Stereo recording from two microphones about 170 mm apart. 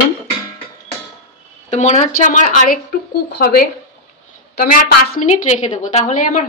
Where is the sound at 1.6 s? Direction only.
40° left (ahead or behind).